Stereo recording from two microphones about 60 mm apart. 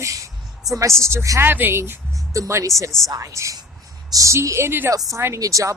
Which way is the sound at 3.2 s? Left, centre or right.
Right.